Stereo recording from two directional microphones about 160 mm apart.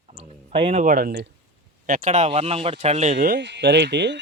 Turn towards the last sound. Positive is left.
turn(degrees=-90)